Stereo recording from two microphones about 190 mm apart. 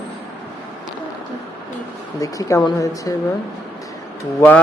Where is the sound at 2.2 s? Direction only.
15° left (ahead or behind).